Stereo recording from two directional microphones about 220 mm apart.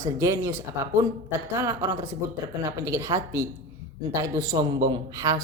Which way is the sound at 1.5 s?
15° right (ahead or behind).